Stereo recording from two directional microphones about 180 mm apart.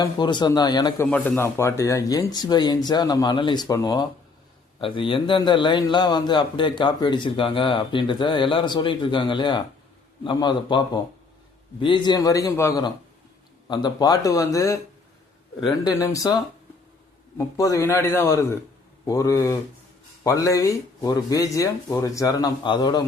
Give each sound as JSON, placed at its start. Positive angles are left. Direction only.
{"t": 0.0, "sound": "a man's voice", "side_deg": 25}
{"t": 1.1, "sound": "a man's voice", "side_deg": 10}
{"t": 15.8, "sound": "a man's voice", "side_deg": 20}